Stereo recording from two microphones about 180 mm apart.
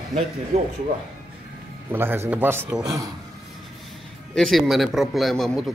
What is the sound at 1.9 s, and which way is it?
A man's voice, 15° right (ahead or behind).